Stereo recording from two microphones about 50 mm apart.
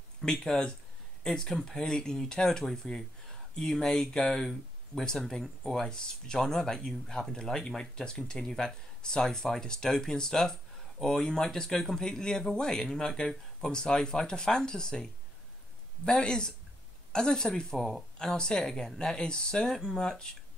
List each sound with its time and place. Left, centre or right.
0.2 s speech: centre
16.1 s speech: centre
17.8 s speech: centre
18.3 s speech: centre